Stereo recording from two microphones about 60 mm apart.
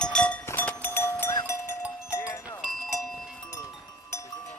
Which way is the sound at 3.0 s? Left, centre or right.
Centre.